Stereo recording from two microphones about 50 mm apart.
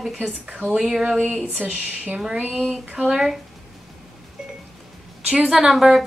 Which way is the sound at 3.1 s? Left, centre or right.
Centre.